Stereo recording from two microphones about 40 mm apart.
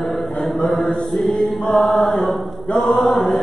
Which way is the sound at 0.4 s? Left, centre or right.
Centre.